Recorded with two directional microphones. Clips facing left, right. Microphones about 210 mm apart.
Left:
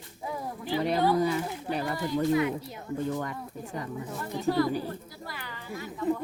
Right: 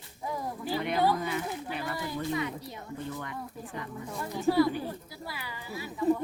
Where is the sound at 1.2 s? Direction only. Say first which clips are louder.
Left 5 dB; 35° left (ahead or behind).